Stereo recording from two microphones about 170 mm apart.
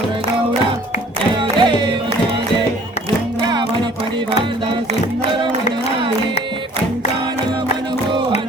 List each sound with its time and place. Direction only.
1.4 s music: 30° right (ahead or behind)